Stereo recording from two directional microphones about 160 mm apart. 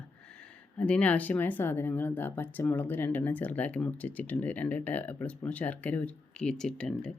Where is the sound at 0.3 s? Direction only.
5° left (ahead or behind).